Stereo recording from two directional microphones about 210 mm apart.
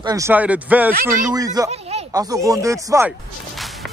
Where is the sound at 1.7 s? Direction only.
30° right (ahead or behind).